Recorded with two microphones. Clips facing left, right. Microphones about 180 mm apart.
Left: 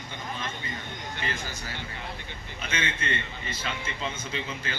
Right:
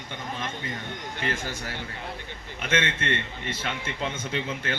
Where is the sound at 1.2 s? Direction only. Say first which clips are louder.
Right 5 dB; 70° right (ahead or behind).